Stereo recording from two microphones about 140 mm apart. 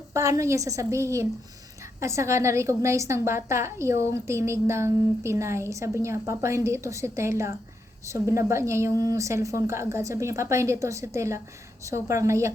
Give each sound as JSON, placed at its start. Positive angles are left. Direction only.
{"t": 0.1, "sound": "a woman's voice", "side_deg": -20}